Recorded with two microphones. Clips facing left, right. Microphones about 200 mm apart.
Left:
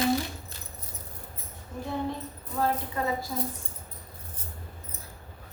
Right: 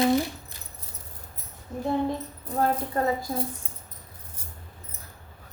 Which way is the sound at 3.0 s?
45° right (ahead or behind).